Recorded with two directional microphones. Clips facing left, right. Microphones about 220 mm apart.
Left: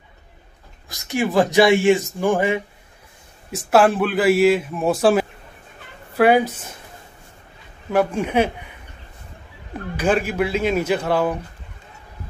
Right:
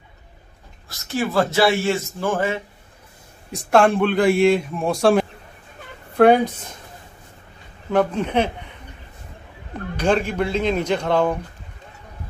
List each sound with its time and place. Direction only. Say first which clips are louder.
0.8 s a man's voice: left 2 dB; 15° left (ahead or behind)
7.9 s a man's voice: even; 10° left (ahead or behind)
9.9 s a man's voice: even; 5° left (ahead or behind)